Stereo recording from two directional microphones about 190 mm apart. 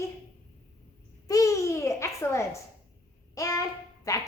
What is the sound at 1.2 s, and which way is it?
A woman's voice, 15° left (ahead or behind).